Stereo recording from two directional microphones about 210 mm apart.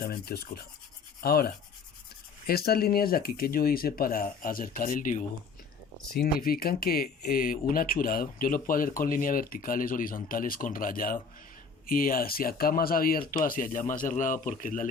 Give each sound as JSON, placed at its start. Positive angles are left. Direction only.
{"t": 0.0, "sound": "speech", "side_deg": 45}